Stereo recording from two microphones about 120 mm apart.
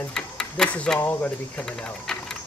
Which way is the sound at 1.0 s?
15° left (ahead or behind).